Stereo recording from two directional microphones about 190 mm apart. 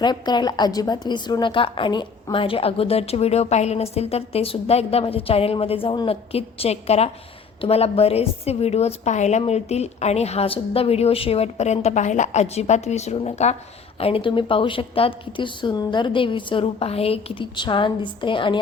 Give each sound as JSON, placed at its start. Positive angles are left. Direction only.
{"t": 0.0, "sound": "a woman's voice", "side_deg": 25}